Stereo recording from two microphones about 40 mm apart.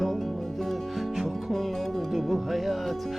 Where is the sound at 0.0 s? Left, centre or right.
Centre.